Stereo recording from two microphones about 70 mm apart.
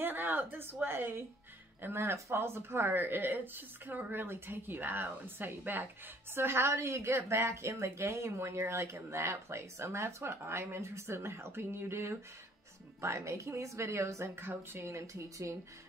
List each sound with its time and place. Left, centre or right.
0.0 s a woman's voice: right